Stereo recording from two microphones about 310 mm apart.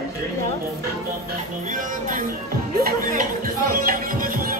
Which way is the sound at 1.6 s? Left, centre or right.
Right.